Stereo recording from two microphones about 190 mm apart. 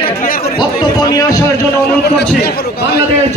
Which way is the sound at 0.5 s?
20° left (ahead or behind).